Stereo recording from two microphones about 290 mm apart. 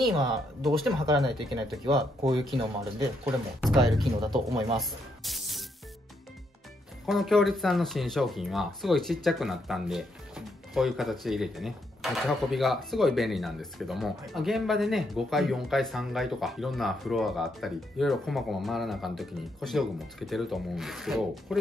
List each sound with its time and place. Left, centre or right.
0.0 s speech: centre
4.7 s music: centre
7.1 s speech: centre